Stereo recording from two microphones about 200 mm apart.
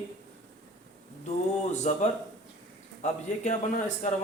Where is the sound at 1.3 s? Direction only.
35° left (ahead or behind).